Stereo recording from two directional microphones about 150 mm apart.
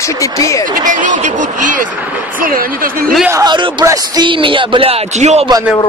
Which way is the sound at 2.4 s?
70° right (ahead or behind).